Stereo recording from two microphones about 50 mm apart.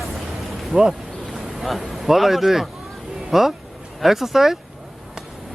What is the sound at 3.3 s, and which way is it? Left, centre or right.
Speech, centre.